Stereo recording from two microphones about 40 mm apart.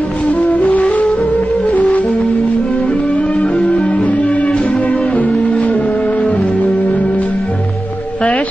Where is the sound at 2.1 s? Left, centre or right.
Centre.